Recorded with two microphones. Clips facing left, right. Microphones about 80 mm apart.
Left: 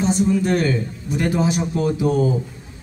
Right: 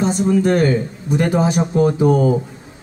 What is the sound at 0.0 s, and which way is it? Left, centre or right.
A man's voice, right.